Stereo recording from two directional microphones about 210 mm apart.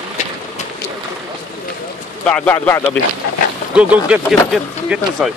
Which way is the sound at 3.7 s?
5° right (ahead or behind).